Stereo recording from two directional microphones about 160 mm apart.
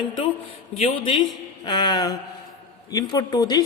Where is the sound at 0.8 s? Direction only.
40° left (ahead or behind).